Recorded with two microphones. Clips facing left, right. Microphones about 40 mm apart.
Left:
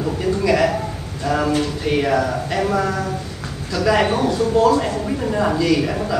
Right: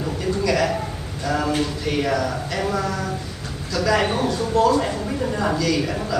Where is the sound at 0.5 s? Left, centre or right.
Centre.